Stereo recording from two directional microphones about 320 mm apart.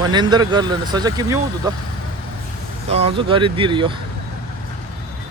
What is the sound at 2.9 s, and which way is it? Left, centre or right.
Speech, centre.